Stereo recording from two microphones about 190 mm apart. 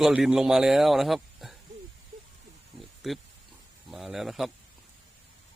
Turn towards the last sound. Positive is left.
turn(degrees=0)  # may be behind; listen again after turning